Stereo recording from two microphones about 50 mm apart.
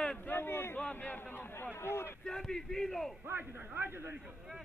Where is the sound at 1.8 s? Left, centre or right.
Left.